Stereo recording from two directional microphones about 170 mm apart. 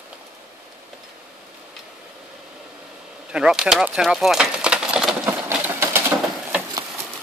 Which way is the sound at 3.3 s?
5° right (ahead or behind).